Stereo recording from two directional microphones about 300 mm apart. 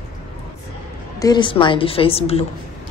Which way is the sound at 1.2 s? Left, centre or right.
Centre.